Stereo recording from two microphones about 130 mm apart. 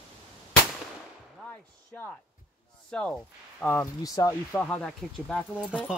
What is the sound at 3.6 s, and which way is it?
Speech, 15° left (ahead or behind).